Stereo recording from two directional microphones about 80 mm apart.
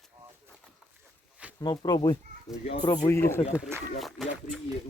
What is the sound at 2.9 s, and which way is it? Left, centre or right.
Speech, left.